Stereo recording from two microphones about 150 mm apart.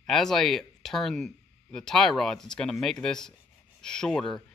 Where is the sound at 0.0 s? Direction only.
5° left (ahead or behind).